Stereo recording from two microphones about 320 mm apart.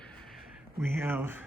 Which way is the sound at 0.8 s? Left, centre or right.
Centre.